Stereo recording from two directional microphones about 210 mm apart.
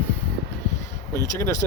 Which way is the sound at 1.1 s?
15° left (ahead or behind).